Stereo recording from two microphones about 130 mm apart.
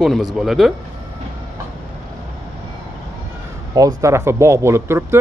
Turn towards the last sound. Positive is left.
turn(degrees=-20)  # may be behind; listen again after turning